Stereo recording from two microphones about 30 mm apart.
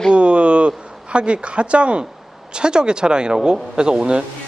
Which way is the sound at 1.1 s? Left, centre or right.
Right.